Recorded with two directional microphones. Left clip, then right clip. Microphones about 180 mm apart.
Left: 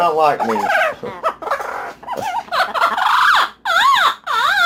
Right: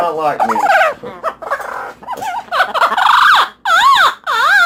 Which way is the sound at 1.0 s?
Centre (ahead or behind).